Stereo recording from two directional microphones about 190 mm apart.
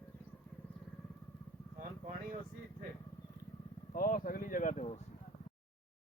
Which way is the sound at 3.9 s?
50° left (ahead or behind).